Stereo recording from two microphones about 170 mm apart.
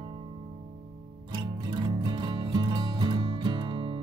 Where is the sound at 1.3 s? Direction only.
25° right (ahead or behind).